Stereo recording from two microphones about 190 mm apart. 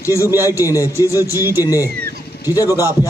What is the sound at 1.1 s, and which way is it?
Speech, 15° right (ahead or behind).